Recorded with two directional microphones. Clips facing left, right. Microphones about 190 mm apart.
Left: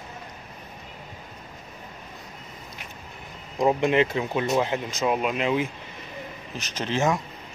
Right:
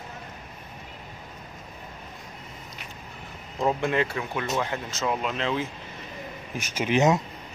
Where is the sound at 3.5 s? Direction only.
20° left (ahead or behind).